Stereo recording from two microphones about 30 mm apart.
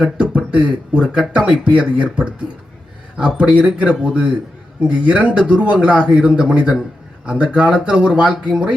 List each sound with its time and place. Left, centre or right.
0.2 s a man's voice: right